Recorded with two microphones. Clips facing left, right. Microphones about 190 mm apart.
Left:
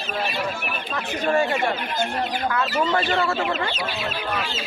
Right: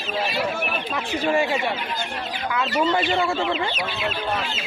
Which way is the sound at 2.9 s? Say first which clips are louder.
Even; 15° right (ahead or behind).